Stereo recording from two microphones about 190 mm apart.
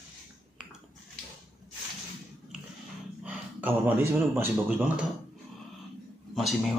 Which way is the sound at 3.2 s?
10° right (ahead or behind).